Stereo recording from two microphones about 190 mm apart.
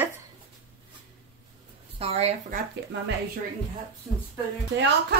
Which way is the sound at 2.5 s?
65° right (ahead or behind).